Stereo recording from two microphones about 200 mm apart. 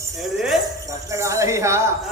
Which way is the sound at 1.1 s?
15° right (ahead or behind).